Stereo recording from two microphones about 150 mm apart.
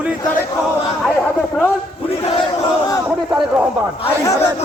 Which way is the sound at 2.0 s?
35° left (ahead or behind).